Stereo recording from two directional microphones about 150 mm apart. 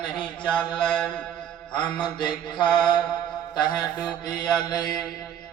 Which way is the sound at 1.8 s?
30° left (ahead or behind).